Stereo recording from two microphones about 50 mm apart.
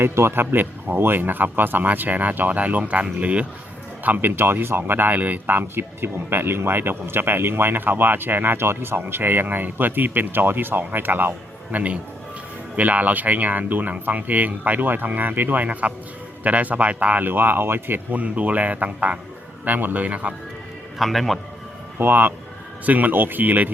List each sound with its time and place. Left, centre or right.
0.0 s speech: right
0.6 s speech: right
4.0 s speech: right
12.7 s speech: right
17.2 s speech: right
21.0 s a man's voice: centre
21.9 s speech: right